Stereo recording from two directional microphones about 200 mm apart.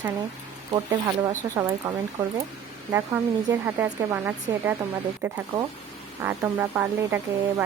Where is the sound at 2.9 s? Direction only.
15° right (ahead or behind).